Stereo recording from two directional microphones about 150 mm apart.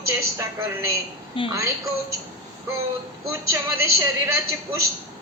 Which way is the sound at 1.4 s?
35° left (ahead or behind).